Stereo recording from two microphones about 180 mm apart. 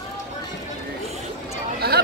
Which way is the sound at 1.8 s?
60° right (ahead or behind).